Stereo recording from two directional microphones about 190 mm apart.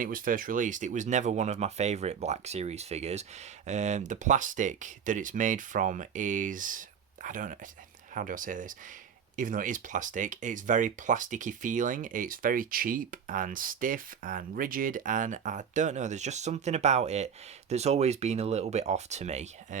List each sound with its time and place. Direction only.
0.0 s speech: 45° right (ahead or behind)